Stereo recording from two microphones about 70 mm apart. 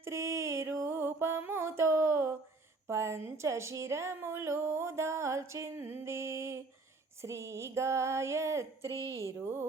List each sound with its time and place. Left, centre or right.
0.0 s mantra: right
1.4 s music: right
2.9 s a sound: right
8.9 s a woman's voice: left
9.4 s speech: right